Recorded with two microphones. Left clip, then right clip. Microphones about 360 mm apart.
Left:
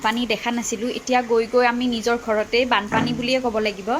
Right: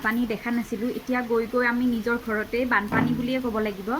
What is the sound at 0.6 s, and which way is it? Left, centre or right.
Speech, left.